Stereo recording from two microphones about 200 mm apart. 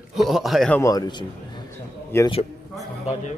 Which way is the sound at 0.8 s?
20° left (ahead or behind).